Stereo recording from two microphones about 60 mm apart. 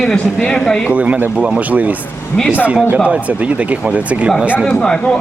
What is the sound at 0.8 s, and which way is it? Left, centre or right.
Speech, right.